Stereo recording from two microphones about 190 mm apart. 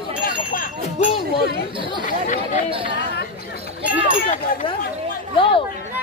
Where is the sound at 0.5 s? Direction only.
40° left (ahead or behind).